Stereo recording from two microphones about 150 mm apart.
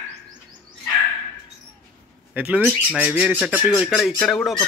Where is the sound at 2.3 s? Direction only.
10° right (ahead or behind).